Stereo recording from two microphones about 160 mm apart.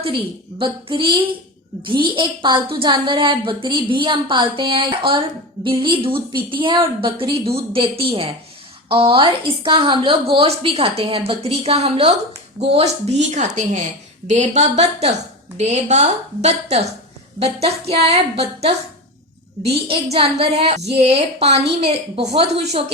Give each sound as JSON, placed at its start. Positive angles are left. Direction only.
{"t": 0.6, "sound": "a woman's voice", "side_deg": -35}